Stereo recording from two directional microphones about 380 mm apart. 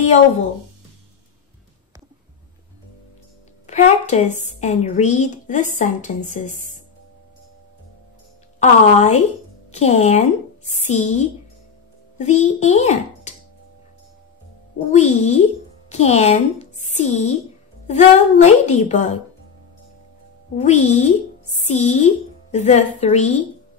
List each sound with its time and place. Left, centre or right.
3.6 s a woman's voice: centre
8.5 s a woman's voice: centre
14.9 s a woman's voice: centre
20.5 s a woman's voice: centre